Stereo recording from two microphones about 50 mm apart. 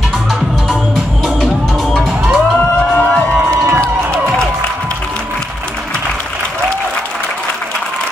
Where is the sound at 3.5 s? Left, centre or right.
Right.